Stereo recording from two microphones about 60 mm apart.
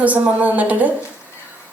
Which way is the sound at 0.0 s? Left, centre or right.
Right.